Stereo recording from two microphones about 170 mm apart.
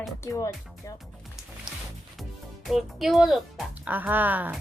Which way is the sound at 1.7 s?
5° right (ahead or behind).